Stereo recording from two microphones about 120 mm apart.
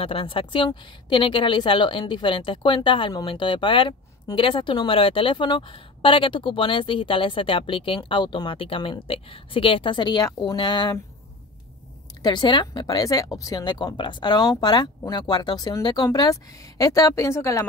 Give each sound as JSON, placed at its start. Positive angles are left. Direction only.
{"t": 0.0, "sound": "a woman's voice", "side_deg": 50}
{"t": 12.2, "sound": "speech", "side_deg": 40}